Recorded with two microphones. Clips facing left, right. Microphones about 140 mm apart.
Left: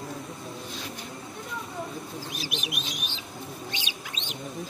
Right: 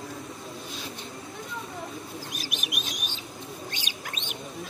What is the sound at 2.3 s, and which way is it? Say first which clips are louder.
Bird: left 2 dB; 50° right (ahead or behind).